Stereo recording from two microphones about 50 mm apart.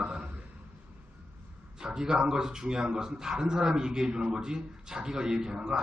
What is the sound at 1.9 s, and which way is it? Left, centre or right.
A man's voice, centre.